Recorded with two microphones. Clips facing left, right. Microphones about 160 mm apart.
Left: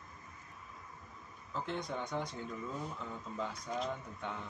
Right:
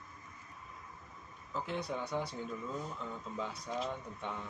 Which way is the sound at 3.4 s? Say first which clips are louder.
Even; centre (ahead or behind).